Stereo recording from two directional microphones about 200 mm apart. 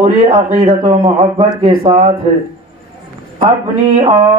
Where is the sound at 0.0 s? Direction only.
30° right (ahead or behind).